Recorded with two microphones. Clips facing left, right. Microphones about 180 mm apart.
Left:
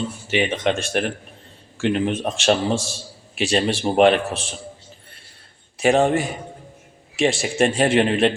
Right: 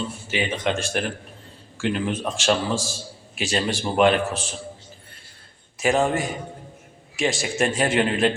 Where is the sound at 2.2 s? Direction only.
35° left (ahead or behind).